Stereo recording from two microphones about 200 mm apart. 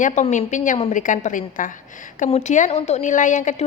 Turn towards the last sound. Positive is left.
turn(degrees=40)  # may be behind; listen again after turning